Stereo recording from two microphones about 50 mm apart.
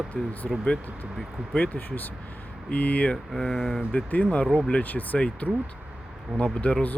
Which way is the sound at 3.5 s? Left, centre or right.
Centre.